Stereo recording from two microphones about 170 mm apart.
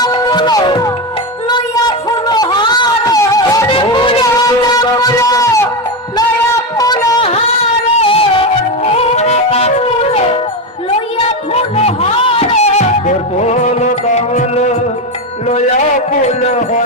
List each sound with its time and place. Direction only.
0.0 s music: 25° left (ahead or behind)
1.5 s a sound: 25° left (ahead or behind)
3.7 s music: 30° left (ahead or behind)
6.7 s a sound: 20° left (ahead or behind)
7.9 s music: 35° left (ahead or behind)
11.5 s music: 40° left (ahead or behind)
16.2 s music: 40° left (ahead or behind)